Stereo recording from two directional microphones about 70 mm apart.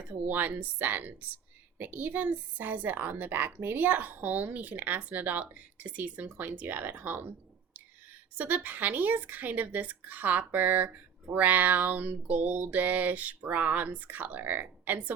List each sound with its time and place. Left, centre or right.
0.1 s speech: right